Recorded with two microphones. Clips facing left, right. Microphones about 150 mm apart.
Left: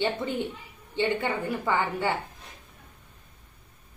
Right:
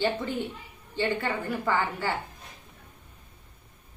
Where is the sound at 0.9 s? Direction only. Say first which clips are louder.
Left 2 dB; 20° left (ahead or behind).